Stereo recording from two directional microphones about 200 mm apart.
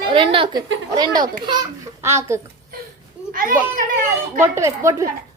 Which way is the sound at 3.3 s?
45° right (ahead or behind).